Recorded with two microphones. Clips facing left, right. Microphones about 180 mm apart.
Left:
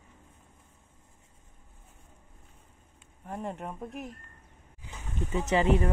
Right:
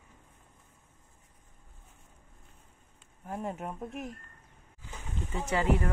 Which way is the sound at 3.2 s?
Centre (ahead or behind).